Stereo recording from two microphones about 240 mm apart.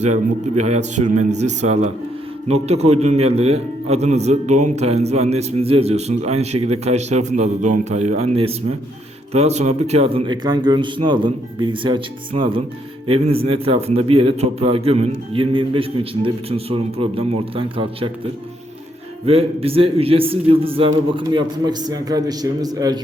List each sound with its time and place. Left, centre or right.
0.0 s a man's voice: right
19.2 s a man's voice: right